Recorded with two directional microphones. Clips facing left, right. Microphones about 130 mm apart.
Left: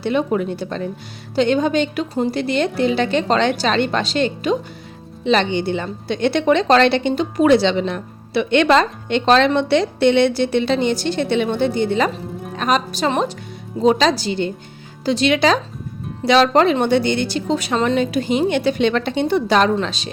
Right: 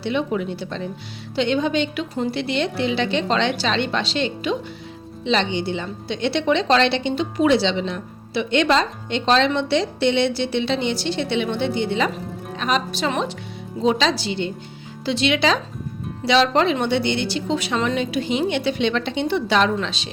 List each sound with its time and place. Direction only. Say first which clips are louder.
0.0 s speech: left 4 dB; 45° left (ahead or behind)